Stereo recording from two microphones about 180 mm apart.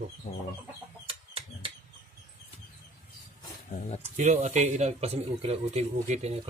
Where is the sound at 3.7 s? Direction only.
40° left (ahead or behind).